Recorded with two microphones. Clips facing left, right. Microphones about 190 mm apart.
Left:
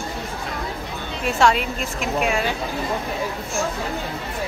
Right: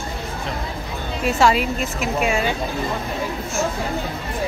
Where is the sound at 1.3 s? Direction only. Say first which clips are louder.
Right 1 dB; centre (ahead or behind).